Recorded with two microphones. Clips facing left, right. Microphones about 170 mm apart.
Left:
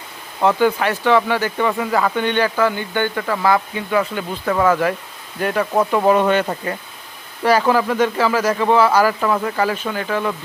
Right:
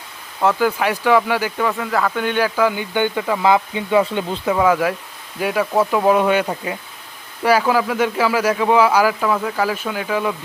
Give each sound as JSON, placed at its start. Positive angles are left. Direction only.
{"t": 0.4, "sound": "speech", "side_deg": -5}
{"t": 4.4, "sound": "speech", "side_deg": -10}